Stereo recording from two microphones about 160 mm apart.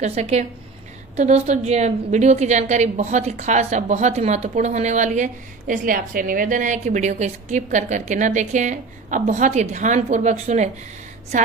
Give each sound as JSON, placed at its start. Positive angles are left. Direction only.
{"t": 0.0, "sound": "a woman's voice", "side_deg": -40}